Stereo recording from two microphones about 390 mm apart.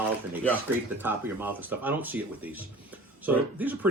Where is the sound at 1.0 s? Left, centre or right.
Centre.